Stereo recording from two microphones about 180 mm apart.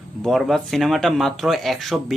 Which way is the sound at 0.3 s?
Centre (ahead or behind).